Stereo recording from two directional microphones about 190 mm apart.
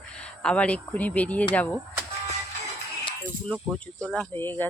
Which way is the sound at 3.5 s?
5° left (ahead or behind).